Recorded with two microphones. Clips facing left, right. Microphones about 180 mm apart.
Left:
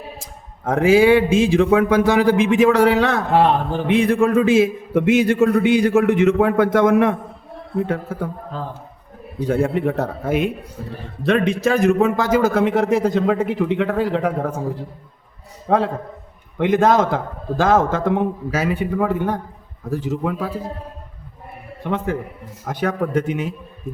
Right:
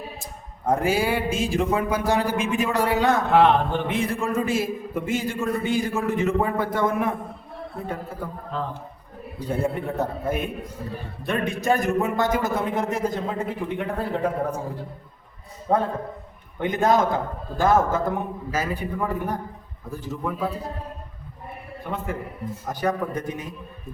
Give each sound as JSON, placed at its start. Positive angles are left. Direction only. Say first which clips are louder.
{"t": 0.6, "sound": "speech", "louder": "left 8 dB", "side_deg": 90}
{"t": 3.3, "sound": "speech", "louder": "left 2 dB", "side_deg": 35}
{"t": 3.8, "sound": "a man's voice", "louder": "left 9 dB", "side_deg": 80}
{"t": 9.5, "sound": "a man's voice", "louder": "left 7 dB", "side_deg": 90}
{"t": 15.7, "sound": "a man's voice", "louder": "left 4 dB", "side_deg": 90}
{"t": 21.8, "sound": "speech", "louder": "left 7 dB", "side_deg": 90}